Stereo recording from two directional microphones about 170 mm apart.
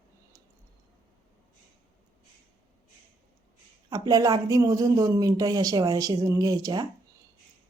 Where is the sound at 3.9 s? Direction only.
20° right (ahead or behind).